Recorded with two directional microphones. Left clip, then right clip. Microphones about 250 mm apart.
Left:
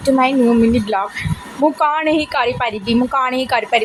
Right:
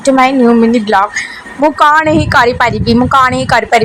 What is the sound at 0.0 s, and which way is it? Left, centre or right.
A woman's voice, centre.